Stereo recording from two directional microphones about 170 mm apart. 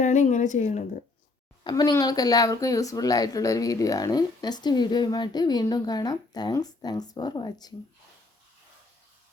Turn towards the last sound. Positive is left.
turn(degrees=25)  # may be behind; listen again after turning